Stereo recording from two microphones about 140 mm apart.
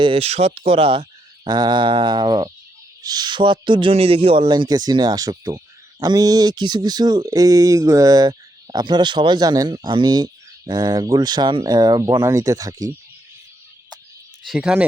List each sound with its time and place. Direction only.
0.0 s a sound: 45° right (ahead or behind)
3.0 s speech: 30° right (ahead or behind)
14.4 s speech: 5° right (ahead or behind)